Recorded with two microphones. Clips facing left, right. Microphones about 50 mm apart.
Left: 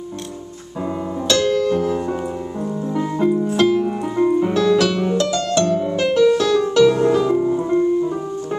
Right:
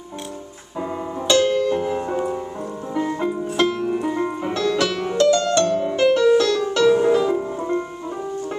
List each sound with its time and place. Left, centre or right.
1.2 s music: centre